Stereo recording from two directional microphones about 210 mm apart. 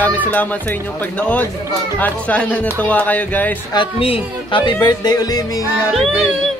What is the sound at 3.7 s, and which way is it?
Speech, 25° left (ahead or behind).